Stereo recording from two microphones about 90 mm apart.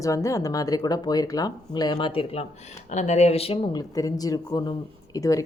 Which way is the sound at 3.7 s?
40° left (ahead or behind).